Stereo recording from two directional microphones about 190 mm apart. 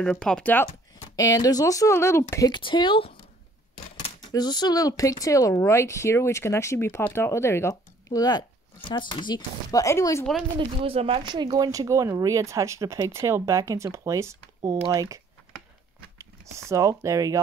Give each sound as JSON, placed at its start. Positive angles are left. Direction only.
{"t": 0.0, "sound": "speech", "side_deg": 5}
{"t": 1.1, "sound": "speech", "side_deg": 20}
{"t": 4.3, "sound": "speech", "side_deg": 20}
{"t": 10.8, "sound": "speech", "side_deg": -30}